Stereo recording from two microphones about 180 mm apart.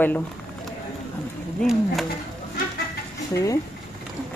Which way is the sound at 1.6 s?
Centre (ahead or behind).